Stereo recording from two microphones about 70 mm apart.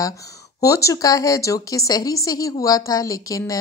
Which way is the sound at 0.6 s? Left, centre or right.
Left.